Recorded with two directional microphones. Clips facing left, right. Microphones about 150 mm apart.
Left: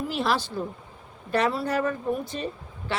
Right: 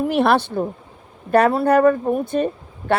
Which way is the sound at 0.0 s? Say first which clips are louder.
Right 9 dB; 60° right (ahead or behind).